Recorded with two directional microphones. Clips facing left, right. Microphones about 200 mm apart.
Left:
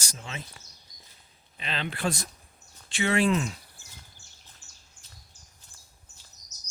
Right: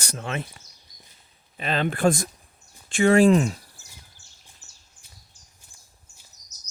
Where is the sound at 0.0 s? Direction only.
60° right (ahead or behind).